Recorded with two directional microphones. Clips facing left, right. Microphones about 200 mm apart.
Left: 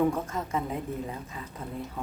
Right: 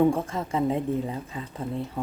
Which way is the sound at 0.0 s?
30° right (ahead or behind).